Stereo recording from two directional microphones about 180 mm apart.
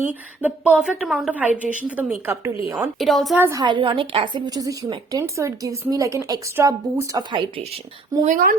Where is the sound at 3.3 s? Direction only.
10° right (ahead or behind).